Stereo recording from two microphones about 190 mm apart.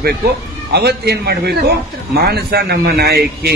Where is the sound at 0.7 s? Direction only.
60° right (ahead or behind).